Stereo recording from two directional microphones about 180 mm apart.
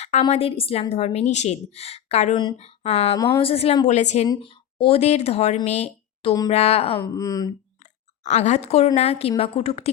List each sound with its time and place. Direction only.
0.0 s a woman's voice: 40° left (ahead or behind)
3.2 s speech: 15° left (ahead or behind)
3.4 s a woman's voice: 35° left (ahead or behind)
7.0 s speech: 20° left (ahead or behind)
8.2 s a woman's voice: 40° left (ahead or behind)